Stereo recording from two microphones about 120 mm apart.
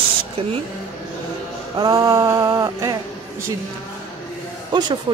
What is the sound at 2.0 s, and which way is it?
Speech, 35° right (ahead or behind).